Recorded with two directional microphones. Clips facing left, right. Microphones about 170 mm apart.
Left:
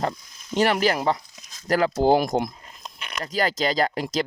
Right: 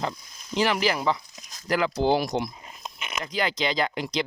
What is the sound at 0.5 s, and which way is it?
Speech, 50° left (ahead or behind).